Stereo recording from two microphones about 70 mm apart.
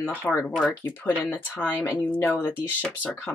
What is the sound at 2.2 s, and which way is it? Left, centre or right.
Speech, left.